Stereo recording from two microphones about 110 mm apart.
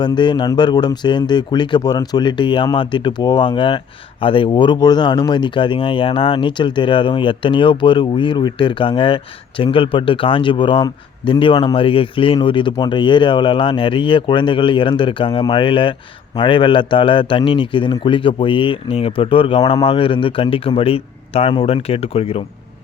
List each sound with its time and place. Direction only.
0.0 s speech: 45° left (ahead or behind); by 22.4 s 60° left (ahead or behind)